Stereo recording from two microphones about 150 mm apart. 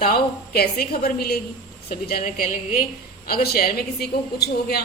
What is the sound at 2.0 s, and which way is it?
Speech, 75° left (ahead or behind).